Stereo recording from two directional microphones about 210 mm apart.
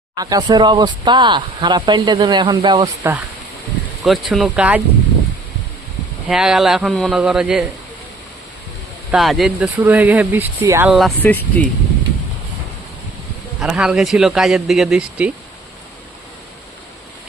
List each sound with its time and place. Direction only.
0.2 s speech: 15° right (ahead or behind)
4.0 s speech: centre (ahead or behind)
6.2 s speech: 5° right (ahead or behind)
9.1 s speech: centre (ahead or behind)
10.8 s speech: centre (ahead or behind)
13.6 s speech: 5° right (ahead or behind)